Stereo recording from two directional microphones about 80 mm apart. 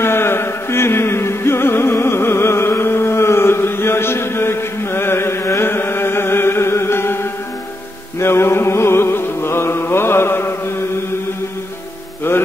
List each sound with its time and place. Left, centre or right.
0.0 s music: left
8.2 s music: left